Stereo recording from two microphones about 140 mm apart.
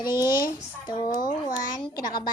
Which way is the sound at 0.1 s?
15° right (ahead or behind).